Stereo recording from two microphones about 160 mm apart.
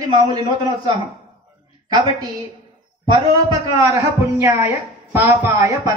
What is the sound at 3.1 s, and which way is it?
A man's voice, 20° right (ahead or behind).